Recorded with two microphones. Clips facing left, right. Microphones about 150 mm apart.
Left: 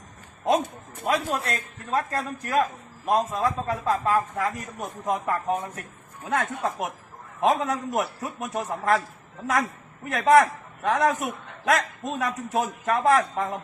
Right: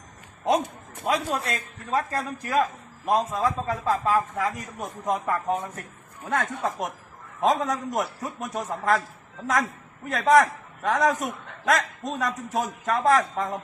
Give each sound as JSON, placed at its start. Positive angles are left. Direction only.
{"t": 1.0, "sound": "a man's voice", "side_deg": 0}